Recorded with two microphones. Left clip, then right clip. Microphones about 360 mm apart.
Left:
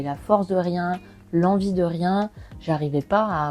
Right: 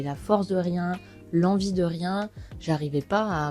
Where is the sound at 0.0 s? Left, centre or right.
Right.